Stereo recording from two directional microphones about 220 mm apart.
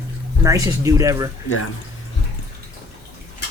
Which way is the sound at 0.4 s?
15° right (ahead or behind).